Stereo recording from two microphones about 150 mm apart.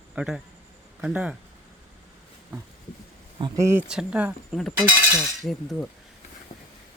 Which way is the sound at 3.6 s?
20° right (ahead or behind).